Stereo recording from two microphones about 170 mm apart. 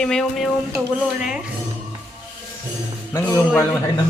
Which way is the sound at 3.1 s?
15° left (ahead or behind).